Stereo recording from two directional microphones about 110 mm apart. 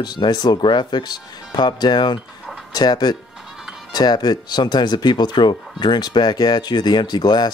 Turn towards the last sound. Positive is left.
turn(degrees=40)  # may be behind; listen again after turning